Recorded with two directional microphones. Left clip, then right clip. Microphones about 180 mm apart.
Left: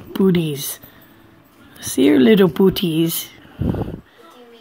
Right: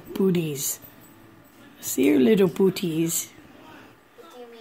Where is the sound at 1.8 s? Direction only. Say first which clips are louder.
Left 6 dB; 20° left (ahead or behind).